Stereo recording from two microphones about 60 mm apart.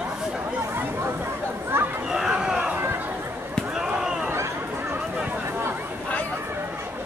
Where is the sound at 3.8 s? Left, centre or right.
Centre.